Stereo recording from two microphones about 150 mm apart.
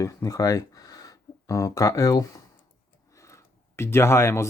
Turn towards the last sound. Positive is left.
turn(degrees=20)  # may be behind; listen again after turning